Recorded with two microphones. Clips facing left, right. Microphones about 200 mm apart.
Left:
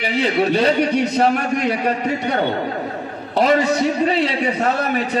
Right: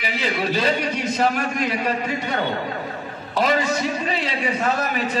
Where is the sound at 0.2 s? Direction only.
65° left (ahead or behind).